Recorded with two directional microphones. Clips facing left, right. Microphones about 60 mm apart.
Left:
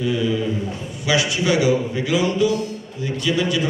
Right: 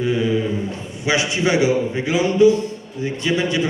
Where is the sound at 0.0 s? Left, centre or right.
Right.